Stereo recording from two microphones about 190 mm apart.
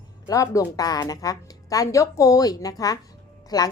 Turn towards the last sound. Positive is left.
turn(degrees=20)  # may be behind; listen again after turning